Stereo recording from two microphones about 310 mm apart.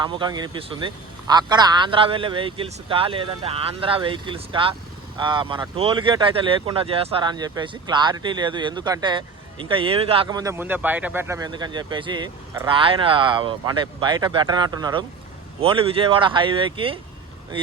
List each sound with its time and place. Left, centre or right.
0.0 s speech: centre